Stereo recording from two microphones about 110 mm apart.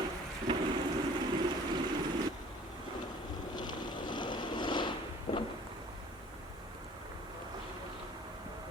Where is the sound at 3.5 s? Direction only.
40° left (ahead or behind).